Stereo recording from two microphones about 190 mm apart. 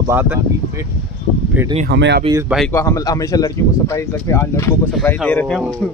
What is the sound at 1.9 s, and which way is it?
Speech, 65° right (ahead or behind).